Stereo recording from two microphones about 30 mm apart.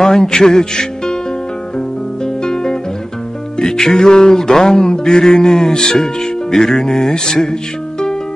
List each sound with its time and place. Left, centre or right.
0.0 s speech: centre
2.2 s guitar: left
3.5 s music: centre
6.5 s speech: centre